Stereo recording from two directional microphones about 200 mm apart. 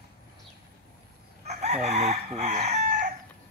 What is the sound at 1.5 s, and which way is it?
Crowing, 35° right (ahead or behind).